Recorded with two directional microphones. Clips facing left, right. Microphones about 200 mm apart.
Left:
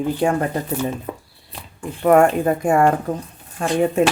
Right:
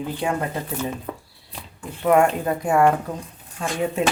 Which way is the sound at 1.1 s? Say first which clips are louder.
Left 2 dB; 10° left (ahead or behind).